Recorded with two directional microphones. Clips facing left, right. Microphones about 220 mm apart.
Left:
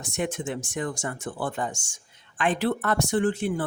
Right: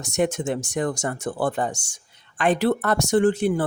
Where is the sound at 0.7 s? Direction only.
40° right (ahead or behind).